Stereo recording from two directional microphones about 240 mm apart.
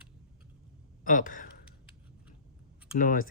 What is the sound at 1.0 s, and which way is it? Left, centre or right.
Speech, left.